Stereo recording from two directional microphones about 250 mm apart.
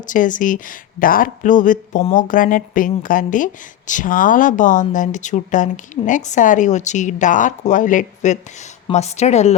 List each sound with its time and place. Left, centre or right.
0.0 s speech: left